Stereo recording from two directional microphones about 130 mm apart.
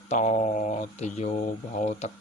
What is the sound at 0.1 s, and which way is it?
Speech, 65° left (ahead or behind).